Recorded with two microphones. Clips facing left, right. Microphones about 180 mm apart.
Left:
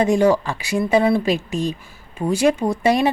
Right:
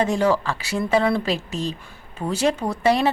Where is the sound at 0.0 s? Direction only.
15° left (ahead or behind).